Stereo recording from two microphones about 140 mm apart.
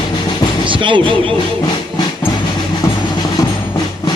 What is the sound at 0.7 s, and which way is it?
Speech, 35° right (ahead or behind).